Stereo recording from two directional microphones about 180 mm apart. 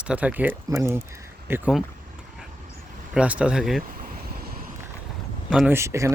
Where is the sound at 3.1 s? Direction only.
5° right (ahead or behind).